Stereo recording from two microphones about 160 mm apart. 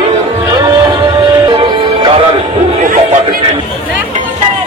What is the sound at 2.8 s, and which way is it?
Music, 50° right (ahead or behind).